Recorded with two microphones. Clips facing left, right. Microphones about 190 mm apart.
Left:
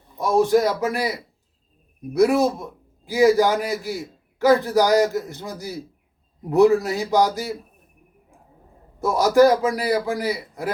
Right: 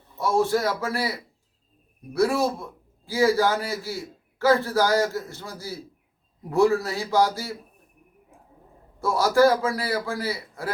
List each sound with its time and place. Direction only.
0.2 s a man's voice: 15° left (ahead or behind)
9.0 s a man's voice: 20° left (ahead or behind)